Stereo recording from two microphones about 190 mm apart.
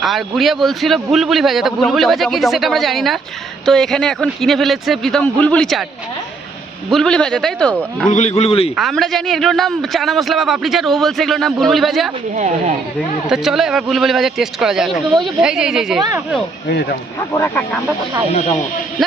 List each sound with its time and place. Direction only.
0.0 s a man's voice: centre (ahead or behind)
6.9 s a man's voice: 5° left (ahead or behind)
8.0 s a man's voice: 40° left (ahead or behind)
8.7 s a man's voice: centre (ahead or behind)
13.2 s a man's voice: 5° right (ahead or behind)
16.6 s speech: 55° left (ahead or behind)
17.2 s speech: 15° left (ahead or behind)